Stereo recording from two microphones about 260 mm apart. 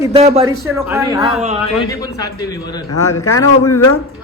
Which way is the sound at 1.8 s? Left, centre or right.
Centre.